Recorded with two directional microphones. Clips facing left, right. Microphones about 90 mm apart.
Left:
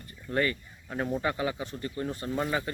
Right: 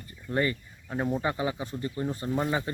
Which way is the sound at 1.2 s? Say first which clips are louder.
Right 1 dB; 20° right (ahead or behind).